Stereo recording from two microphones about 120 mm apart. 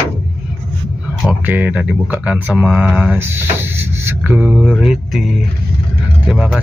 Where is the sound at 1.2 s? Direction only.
15° right (ahead or behind).